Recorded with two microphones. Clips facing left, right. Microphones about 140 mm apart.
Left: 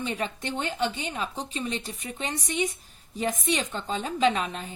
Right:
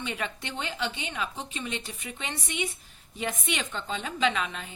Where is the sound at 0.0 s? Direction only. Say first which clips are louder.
Left 3 dB; 40° left (ahead or behind).